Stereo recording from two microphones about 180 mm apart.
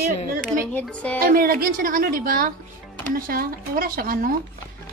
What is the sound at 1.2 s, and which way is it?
Speech, 55° right (ahead or behind).